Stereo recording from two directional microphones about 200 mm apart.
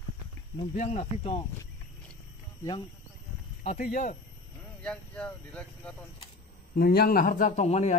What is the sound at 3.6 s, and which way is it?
Speech, 40° left (ahead or behind).